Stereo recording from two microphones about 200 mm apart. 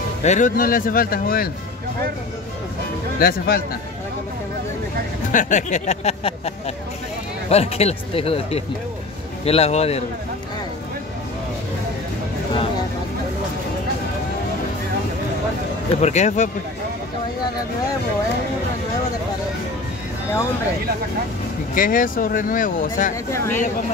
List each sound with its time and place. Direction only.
0.2 s speech: 35° left (ahead or behind)
3.2 s speech: 50° left (ahead or behind)
5.3 s speech: 40° left (ahead or behind)
16.0 s speech: 35° left (ahead or behind)
21.7 s speech: 45° left (ahead or behind)
23.3 s speech: 15° left (ahead or behind)